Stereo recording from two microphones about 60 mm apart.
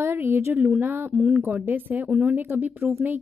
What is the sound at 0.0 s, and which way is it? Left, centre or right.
Speech, right.